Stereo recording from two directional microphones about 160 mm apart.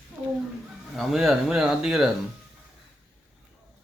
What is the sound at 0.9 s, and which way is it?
Speech, centre (ahead or behind).